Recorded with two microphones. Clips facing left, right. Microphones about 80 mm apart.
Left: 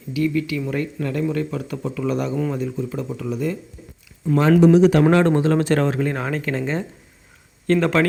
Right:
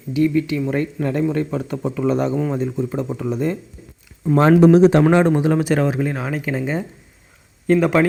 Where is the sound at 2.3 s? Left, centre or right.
Centre.